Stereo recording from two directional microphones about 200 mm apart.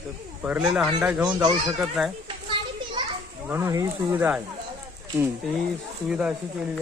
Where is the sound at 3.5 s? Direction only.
15° right (ahead or behind).